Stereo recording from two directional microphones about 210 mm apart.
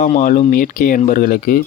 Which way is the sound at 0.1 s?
35° left (ahead or behind).